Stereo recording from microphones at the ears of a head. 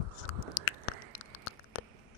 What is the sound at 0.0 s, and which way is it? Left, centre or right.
Chewing, left.